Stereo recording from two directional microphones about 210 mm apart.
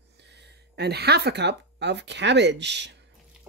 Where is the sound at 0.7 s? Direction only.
50° right (ahead or behind).